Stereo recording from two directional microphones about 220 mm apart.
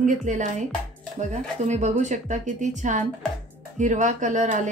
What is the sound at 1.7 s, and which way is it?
Speech, 30° right (ahead or behind).